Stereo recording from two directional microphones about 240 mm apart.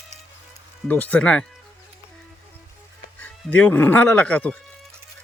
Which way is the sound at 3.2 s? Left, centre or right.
Centre.